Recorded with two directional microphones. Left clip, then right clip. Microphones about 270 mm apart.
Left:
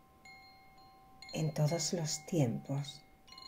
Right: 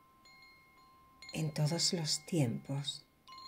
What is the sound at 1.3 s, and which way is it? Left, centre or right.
Speech, right.